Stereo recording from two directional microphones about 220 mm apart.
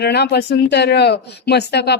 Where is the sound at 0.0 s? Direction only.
50° left (ahead or behind).